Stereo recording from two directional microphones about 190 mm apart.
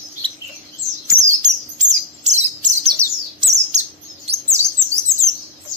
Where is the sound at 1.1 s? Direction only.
40° right (ahead or behind).